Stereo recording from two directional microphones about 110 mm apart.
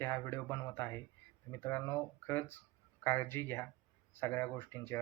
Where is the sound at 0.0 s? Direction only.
20° left (ahead or behind).